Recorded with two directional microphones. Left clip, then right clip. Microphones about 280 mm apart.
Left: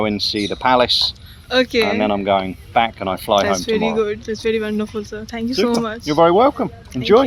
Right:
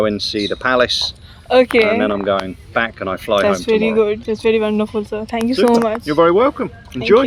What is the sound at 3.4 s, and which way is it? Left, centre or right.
Speech, centre.